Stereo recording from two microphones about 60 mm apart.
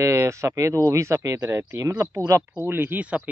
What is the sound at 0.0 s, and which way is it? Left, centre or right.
Speech, right.